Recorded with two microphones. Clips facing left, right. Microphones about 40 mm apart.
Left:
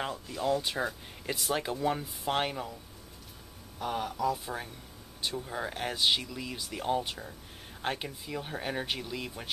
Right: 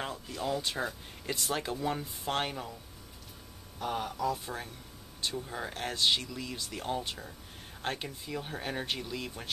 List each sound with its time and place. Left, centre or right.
0.0 s speech: centre
3.8 s speech: centre